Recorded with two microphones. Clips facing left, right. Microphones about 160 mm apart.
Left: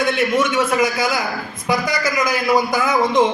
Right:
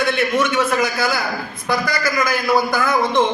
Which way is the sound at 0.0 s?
10° left (ahead or behind).